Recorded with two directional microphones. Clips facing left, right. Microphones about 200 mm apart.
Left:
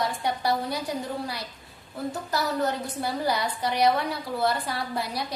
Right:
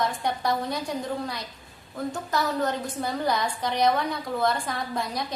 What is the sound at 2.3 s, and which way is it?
A woman's voice, 10° left (ahead or behind).